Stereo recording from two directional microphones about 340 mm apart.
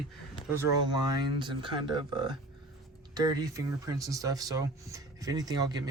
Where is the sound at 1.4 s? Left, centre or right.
Centre.